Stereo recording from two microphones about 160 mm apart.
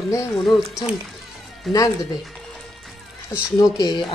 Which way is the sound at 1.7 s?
Centre (ahead or behind).